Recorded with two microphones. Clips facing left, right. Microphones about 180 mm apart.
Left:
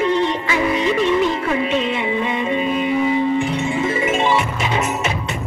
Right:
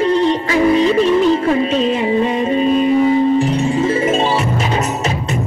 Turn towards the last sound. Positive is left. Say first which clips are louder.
# right 3 dB
turn(degrees=-35)  # may be behind; listen again after turning